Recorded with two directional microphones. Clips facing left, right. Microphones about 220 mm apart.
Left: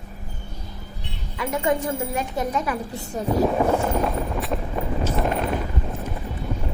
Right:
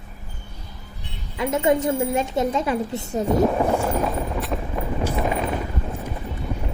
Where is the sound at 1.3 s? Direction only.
25° right (ahead or behind).